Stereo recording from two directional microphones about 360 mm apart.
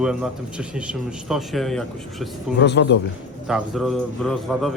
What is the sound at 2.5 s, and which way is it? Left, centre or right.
Speech, left.